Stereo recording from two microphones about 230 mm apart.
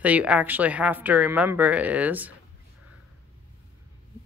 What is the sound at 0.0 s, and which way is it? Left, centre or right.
Speech, centre.